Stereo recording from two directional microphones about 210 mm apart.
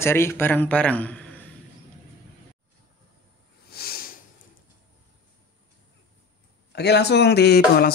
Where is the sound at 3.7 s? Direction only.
45° left (ahead or behind).